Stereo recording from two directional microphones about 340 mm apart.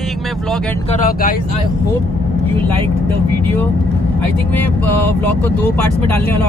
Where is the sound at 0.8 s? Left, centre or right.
Left.